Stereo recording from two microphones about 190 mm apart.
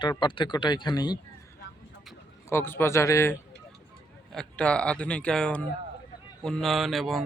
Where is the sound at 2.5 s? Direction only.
10° left (ahead or behind).